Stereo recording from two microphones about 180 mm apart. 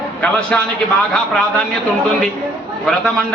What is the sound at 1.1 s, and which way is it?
Speech, 5° left (ahead or behind).